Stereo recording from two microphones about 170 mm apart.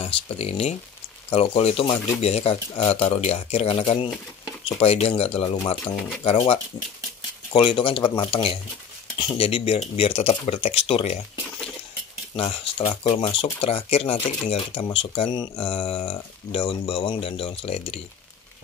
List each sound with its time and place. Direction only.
0.0 s speech: 35° left (ahead or behind)
12.4 s speech: 35° left (ahead or behind)